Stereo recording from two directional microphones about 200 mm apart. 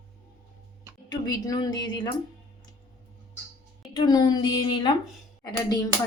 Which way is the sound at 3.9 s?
20° left (ahead or behind).